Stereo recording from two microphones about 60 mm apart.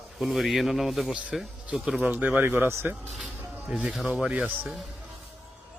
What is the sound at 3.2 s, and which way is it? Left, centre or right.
Music, centre.